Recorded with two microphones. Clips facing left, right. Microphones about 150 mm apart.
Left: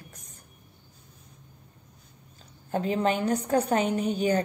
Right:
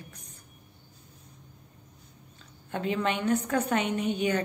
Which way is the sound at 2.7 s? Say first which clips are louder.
Left 3 dB; 40° left (ahead or behind).